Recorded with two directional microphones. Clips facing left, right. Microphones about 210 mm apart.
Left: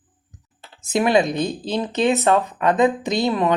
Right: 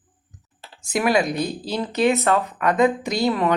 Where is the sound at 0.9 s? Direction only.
25° left (ahead or behind).